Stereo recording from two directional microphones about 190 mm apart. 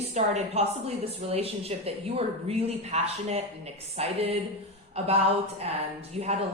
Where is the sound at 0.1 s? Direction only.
35° right (ahead or behind).